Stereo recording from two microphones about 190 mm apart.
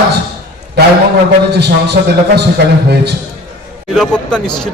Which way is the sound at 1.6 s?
60° right (ahead or behind).